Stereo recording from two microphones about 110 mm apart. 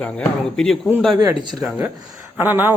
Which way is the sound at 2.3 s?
20° right (ahead or behind).